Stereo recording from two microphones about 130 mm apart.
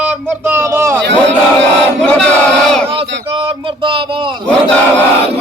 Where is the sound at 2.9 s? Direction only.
45° right (ahead or behind).